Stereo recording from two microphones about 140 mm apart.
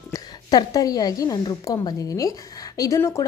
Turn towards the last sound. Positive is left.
turn(degrees=20)  # may be behind; listen again after turning